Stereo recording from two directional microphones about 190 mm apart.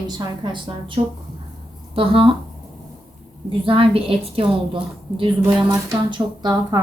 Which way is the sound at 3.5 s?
30° right (ahead or behind).